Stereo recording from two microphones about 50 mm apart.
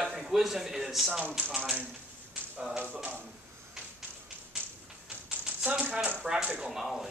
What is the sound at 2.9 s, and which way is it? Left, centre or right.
Speech, right.